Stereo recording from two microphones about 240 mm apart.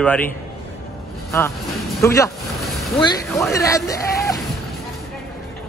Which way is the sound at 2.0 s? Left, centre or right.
Centre.